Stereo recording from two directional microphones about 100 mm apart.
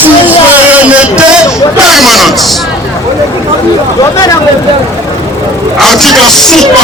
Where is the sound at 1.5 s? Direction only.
5° right (ahead or behind).